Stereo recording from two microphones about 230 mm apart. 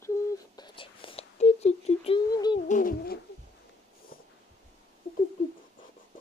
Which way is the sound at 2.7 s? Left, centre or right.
Left.